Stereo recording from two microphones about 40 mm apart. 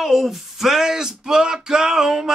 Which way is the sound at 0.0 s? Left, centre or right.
Centre.